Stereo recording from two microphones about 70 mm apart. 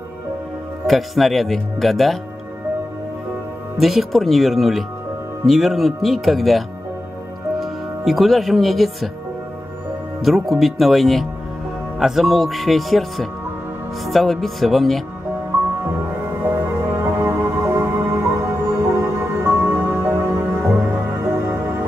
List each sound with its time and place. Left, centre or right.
0.8 s speech: centre
3.7 s speech: centre
7.6 s speech: centre
10.2 s speech: centre
15.8 s music: right